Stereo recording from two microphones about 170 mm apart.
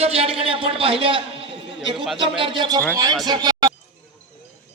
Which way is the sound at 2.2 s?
30° right (ahead or behind).